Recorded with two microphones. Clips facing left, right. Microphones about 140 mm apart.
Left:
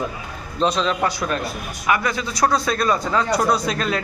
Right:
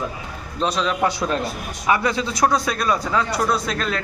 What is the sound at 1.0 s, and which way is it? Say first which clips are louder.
A man's voice: right 1 dB; 25° right (ahead or behind).